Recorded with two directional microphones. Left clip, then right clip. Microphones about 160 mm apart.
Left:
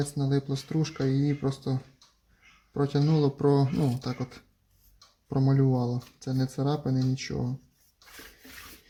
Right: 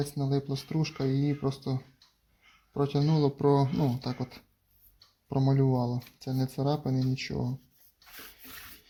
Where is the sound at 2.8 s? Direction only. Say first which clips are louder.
Left 2 dB; 5° right (ahead or behind).